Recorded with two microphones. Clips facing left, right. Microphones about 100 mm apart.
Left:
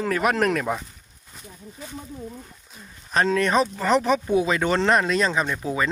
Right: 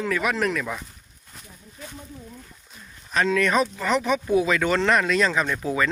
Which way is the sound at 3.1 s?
35° left (ahead or behind).